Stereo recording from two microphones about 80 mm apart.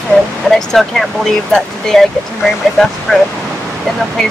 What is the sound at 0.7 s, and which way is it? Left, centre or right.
Speech, centre.